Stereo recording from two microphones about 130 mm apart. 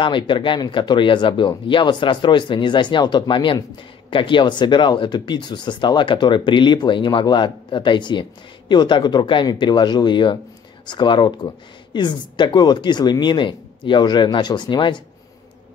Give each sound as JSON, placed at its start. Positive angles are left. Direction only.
{"t": 0.0, "sound": "speech", "side_deg": 40}